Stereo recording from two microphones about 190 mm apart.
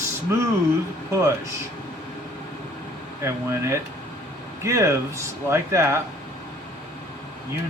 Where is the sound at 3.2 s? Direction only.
15° right (ahead or behind).